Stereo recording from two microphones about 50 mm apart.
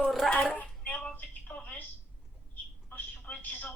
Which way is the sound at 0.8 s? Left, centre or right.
Left.